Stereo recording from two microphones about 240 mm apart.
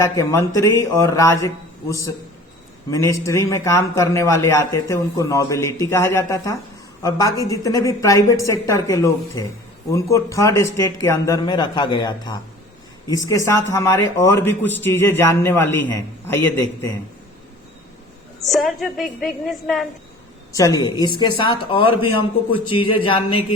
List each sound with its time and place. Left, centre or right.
0.0 s a man's voice: centre
2.9 s a man's voice: centre
18.4 s a woman's voice: centre
20.5 s a man's voice: centre